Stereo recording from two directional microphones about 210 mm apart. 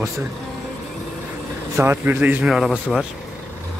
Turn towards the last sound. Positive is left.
turn(degrees=0)  # may be behind; listen again after turning